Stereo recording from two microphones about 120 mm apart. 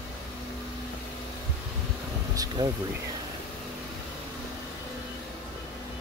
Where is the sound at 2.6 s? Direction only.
30° right (ahead or behind).